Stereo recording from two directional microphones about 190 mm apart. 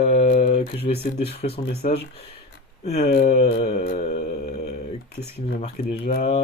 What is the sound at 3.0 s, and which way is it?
Speech, 50° left (ahead or behind).